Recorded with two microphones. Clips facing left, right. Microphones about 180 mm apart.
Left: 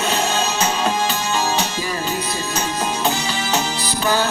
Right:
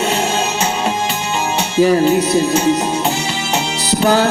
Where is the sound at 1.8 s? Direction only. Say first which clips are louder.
Right 13 dB; 70° right (ahead or behind).